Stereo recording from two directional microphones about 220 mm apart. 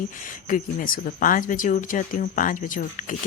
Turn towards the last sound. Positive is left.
turn(degrees=40)  # may be behind; listen again after turning